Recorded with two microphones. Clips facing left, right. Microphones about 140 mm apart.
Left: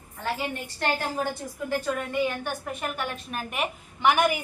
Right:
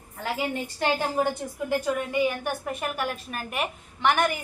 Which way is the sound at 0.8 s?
15° right (ahead or behind).